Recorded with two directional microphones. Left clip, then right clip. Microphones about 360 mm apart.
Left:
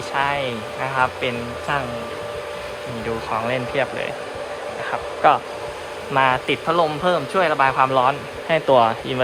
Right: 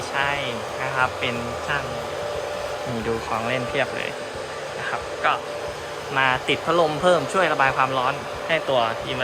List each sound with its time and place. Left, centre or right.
0.1 s speech: centre
3.3 s speech: centre
4.9 s speech: centre